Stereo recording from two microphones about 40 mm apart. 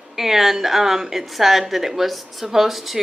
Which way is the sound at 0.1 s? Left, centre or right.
Centre.